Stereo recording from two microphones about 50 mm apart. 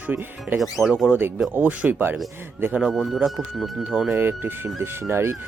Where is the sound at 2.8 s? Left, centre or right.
Centre.